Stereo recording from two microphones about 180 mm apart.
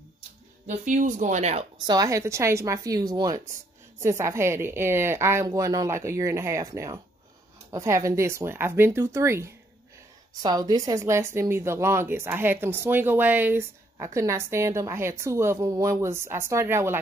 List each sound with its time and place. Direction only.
0.7 s speech: 45° right (ahead or behind)
1.9 s a woman's voice: 20° right (ahead or behind)